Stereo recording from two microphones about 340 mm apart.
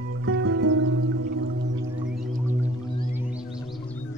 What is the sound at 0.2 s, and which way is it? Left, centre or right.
Music, right.